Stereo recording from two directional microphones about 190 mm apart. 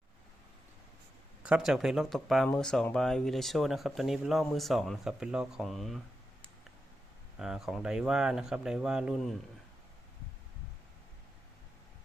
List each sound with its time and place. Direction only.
1.4 s speech: 5° right (ahead or behind)
7.3 s speech: 5° right (ahead or behind)